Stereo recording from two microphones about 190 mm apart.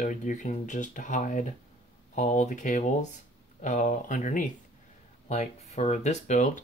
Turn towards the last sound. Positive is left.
turn(degrees=40)  # may be behind; listen again after turning